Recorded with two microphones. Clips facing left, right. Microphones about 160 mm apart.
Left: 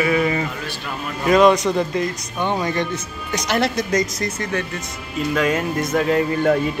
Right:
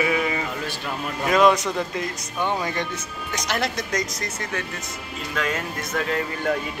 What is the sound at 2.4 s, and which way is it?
Speech, 20° left (ahead or behind).